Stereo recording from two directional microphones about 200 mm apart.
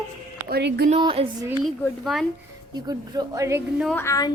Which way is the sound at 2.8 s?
20° right (ahead or behind).